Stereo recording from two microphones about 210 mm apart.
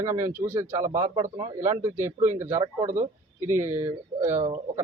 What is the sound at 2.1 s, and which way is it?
Speech, 35° right (ahead or behind).